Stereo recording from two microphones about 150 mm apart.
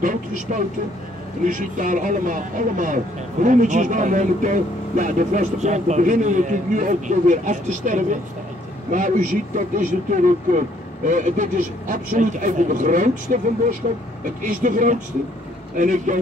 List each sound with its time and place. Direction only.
0.0 s speech: 60° right (ahead or behind)